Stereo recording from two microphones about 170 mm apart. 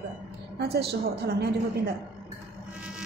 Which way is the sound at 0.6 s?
70° right (ahead or behind).